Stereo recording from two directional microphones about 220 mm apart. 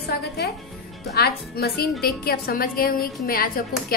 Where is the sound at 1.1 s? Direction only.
45° left (ahead or behind).